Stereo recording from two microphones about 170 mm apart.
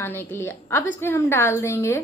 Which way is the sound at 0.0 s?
15° left (ahead or behind).